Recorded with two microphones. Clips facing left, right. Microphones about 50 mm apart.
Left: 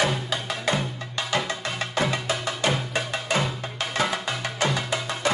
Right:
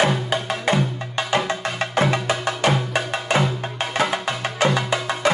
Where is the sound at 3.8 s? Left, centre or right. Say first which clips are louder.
Right 4 dB; right.